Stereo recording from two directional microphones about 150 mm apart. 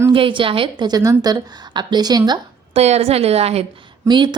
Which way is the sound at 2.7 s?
45° right (ahead or behind).